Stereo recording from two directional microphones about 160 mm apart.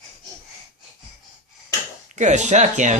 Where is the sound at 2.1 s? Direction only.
50° right (ahead or behind).